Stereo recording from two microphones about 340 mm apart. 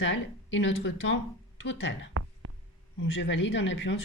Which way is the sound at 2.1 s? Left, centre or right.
Right.